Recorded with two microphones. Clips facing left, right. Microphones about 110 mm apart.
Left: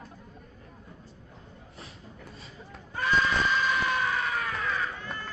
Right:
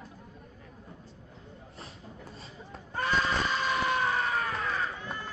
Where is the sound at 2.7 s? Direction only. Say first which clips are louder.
Even; 30° right (ahead or behind).